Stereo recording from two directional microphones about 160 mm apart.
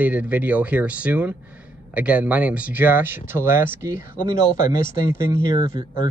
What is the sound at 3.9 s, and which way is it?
Speech, 55° left (ahead or behind).